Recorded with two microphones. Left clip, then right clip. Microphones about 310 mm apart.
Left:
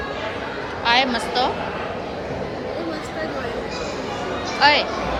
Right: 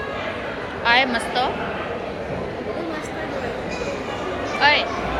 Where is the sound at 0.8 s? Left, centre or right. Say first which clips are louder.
Right 1 dB; centre.